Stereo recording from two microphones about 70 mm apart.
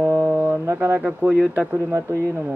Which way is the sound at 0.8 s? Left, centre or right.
Right.